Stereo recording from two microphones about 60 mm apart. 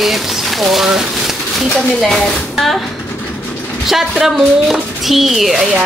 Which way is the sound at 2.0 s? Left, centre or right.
Centre.